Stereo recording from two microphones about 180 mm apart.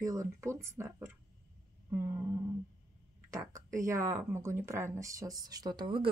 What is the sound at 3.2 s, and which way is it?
Speech, 15° right (ahead or behind).